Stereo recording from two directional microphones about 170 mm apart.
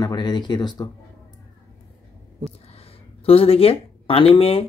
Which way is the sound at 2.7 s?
35° left (ahead or behind).